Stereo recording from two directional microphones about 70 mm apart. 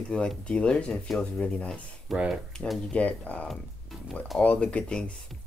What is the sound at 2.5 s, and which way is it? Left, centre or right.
Speech, centre.